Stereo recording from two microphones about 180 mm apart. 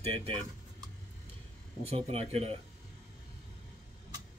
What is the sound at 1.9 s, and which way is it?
Speech, 35° right (ahead or behind).